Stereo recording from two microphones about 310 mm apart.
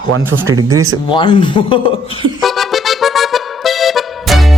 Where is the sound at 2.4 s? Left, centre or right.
Centre.